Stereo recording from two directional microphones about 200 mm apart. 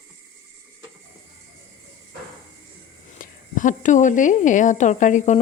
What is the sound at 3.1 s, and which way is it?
A woman's voice, 40° left (ahead or behind).